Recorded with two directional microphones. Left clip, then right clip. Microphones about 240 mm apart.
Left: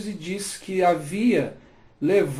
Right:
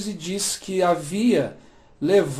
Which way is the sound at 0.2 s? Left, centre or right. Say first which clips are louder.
Right 4 dB; right.